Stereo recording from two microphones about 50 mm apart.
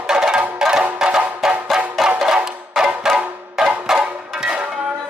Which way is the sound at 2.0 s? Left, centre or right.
Centre.